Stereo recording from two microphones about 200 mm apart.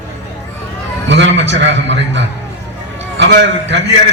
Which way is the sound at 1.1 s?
65° right (ahead or behind).